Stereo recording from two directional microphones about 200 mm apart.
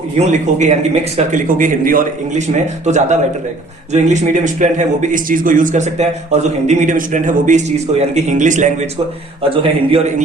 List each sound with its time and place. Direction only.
0.2 s speech: 35° right (ahead or behind)
9.4 s a man's voice: 30° right (ahead or behind)